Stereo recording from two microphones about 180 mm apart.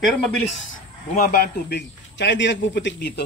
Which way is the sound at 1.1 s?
55° left (ahead or behind).